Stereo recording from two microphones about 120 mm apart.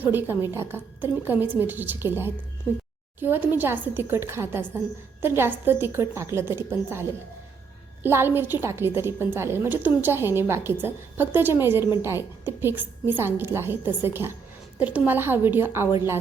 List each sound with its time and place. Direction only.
0.0 s a woman's voice: 15° right (ahead or behind)